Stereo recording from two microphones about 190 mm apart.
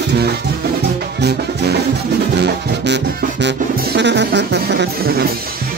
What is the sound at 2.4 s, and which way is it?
Music, 65° right (ahead or behind).